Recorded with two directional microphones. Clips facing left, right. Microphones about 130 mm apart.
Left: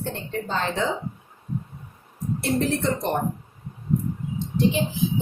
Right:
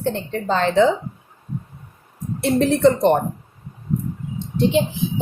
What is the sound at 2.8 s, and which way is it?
Speech, 70° right (ahead or behind).